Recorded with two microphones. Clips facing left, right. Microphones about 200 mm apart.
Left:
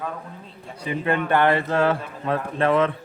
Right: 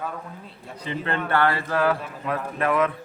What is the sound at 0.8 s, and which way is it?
A man's voice, 15° left (ahead or behind).